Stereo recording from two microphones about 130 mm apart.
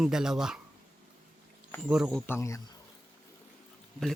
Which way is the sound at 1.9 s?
5° right (ahead or behind).